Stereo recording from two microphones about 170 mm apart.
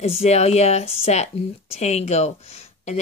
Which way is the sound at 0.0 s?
35° left (ahead or behind).